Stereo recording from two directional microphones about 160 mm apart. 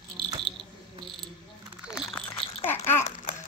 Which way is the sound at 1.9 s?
Centre (ahead or behind).